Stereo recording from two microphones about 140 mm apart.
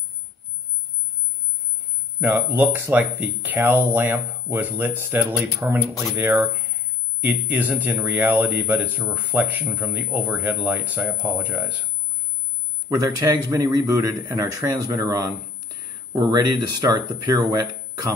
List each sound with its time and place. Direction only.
2.1 s speech: 15° right (ahead or behind)
12.9 s speech: 25° right (ahead or behind)